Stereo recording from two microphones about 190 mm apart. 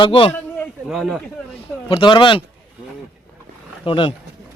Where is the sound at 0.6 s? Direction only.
Centre (ahead or behind).